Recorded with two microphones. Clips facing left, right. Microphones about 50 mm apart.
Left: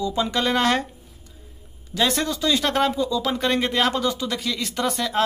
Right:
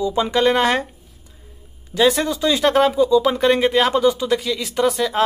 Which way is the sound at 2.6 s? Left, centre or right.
Centre.